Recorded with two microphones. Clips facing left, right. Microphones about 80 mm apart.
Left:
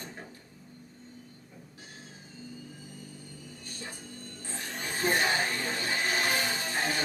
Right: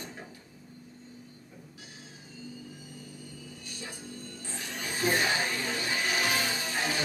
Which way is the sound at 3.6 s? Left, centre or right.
Left.